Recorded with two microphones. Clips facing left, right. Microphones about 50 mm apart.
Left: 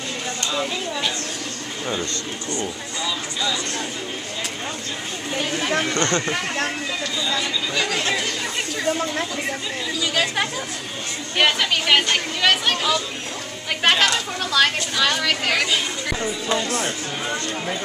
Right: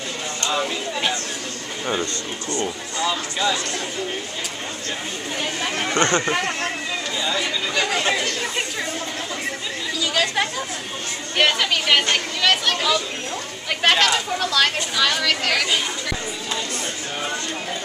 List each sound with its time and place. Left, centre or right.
2.6 s speech: right
5.9 s speech: centre
9.9 s speech: centre